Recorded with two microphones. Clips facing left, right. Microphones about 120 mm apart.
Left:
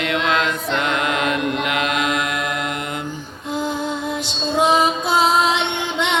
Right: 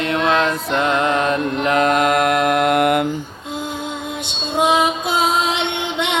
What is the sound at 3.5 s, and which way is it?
Music, 20° right (ahead or behind).